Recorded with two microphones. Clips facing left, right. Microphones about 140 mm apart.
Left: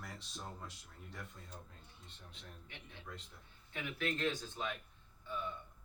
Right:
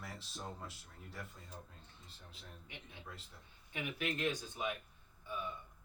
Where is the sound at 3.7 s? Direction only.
15° right (ahead or behind).